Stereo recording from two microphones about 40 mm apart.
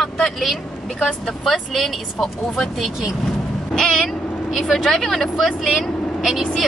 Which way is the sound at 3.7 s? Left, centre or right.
Centre.